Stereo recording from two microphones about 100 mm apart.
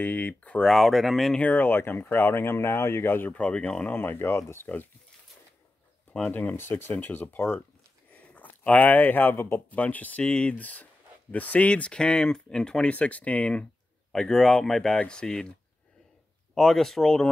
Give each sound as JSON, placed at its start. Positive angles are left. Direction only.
{"t": 0.0, "sound": "speech", "side_deg": 15}
{"t": 1.4, "sound": "speech", "side_deg": 20}
{"t": 6.3, "sound": "speech", "side_deg": 20}
{"t": 16.5, "sound": "speech", "side_deg": 5}